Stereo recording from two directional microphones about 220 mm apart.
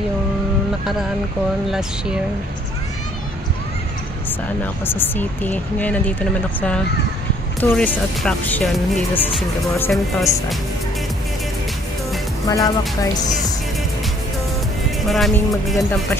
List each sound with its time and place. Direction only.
1.7 s speech: 5° right (ahead or behind)
4.8 s speech: 10° left (ahead or behind)
7.6 s speech: 5° left (ahead or behind)
12.4 s speech: 15° left (ahead or behind)
15.0 s speech: centre (ahead or behind)